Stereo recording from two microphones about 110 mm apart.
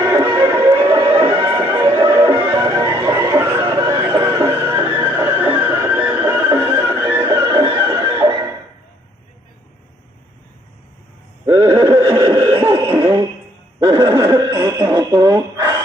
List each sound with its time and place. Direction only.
0.0 s music: 25° right (ahead or behind)
1.8 s music: 40° right (ahead or behind)
2.1 s music: 25° right (ahead or behind)
4.3 s music: 40° right (ahead or behind)
4.5 s music: 20° right (ahead or behind)
11.4 s a sound: 30° right (ahead or behind)